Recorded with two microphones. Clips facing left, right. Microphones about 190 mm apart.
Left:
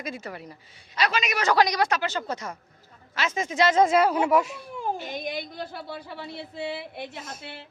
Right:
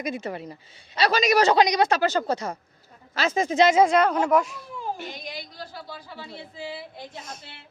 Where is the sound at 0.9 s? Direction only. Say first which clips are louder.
Right 6 dB; 35° right (ahead or behind).